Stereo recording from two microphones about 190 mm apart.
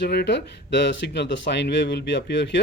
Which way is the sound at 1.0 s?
65° left (ahead or behind).